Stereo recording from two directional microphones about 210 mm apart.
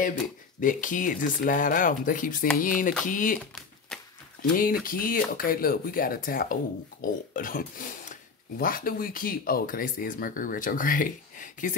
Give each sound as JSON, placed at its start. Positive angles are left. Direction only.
{"t": 0.6, "sound": "speech", "side_deg": 40}
{"t": 3.9, "sound": "a sound", "side_deg": 5}
{"t": 4.4, "sound": "speech", "side_deg": 40}